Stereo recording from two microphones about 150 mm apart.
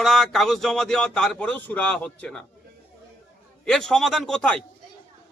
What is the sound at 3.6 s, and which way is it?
A man's voice, 5° left (ahead or behind).